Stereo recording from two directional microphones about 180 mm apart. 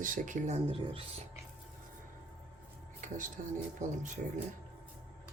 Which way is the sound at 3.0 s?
45° right (ahead or behind).